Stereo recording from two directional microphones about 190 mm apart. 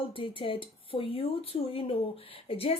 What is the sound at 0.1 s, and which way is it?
Speech, 25° left (ahead or behind).